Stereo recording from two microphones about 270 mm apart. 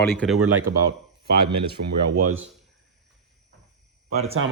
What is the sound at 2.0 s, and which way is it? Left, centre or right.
Speech, right.